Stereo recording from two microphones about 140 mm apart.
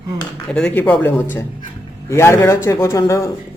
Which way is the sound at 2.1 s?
20° left (ahead or behind).